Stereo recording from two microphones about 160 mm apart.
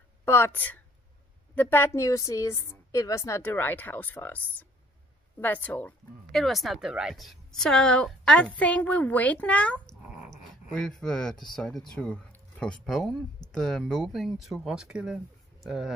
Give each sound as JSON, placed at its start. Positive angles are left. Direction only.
{"t": 0.2, "sound": "a woman's voice", "side_deg": 15}